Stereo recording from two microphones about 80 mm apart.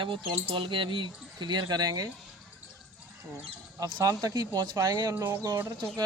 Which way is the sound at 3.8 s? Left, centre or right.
Right.